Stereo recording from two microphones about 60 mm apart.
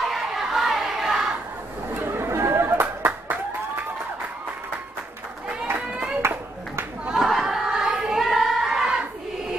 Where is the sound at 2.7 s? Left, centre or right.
Right.